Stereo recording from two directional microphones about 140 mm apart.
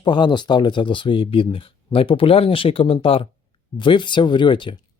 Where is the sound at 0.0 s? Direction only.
35° left (ahead or behind).